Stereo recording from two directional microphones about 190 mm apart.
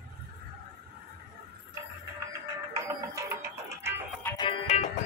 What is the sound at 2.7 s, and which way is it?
Music, 15° right (ahead or behind).